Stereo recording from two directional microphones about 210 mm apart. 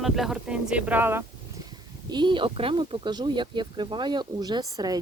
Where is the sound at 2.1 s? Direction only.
20° right (ahead or behind).